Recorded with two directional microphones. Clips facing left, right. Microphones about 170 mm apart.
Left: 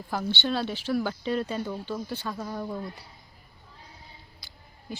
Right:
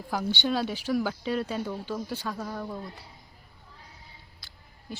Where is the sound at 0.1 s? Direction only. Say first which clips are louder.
Right 1 dB; 10° right (ahead or behind).